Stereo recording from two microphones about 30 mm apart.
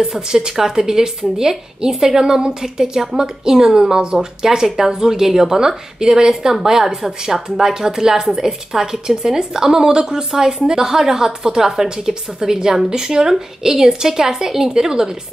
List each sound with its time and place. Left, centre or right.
0.6 s a woman's voice: centre